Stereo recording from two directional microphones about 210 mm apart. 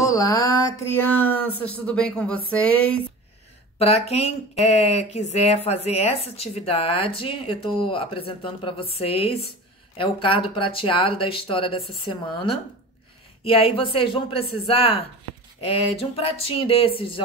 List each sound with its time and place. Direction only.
0.0 s a sound: 15° left (ahead or behind)
2.5 s speech: 5° left (ahead or behind)
3.7 s speech: 30° left (ahead or behind)